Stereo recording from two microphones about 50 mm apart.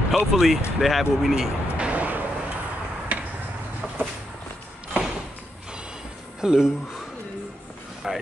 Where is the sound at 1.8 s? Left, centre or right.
Right.